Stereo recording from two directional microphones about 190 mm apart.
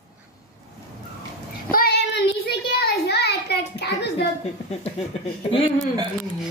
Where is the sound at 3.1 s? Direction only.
60° left (ahead or behind).